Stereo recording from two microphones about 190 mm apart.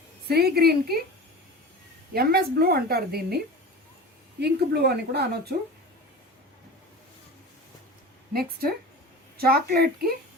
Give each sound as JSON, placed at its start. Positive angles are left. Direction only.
{"t": 0.3, "sound": "a woman's voice", "side_deg": -55}
{"t": 2.1, "sound": "a woman's voice", "side_deg": -55}
{"t": 8.3, "sound": "speech", "side_deg": -50}